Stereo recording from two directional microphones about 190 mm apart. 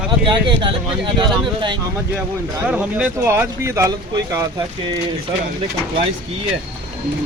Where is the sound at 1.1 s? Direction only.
25° right (ahead or behind).